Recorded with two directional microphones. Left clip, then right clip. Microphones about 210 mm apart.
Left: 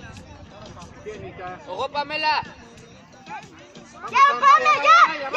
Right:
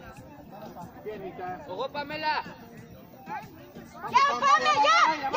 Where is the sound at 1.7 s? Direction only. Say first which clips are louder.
Left 9 dB; 35° left (ahead or behind).